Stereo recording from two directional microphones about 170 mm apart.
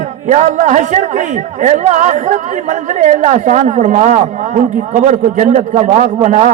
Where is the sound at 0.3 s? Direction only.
45° right (ahead or behind).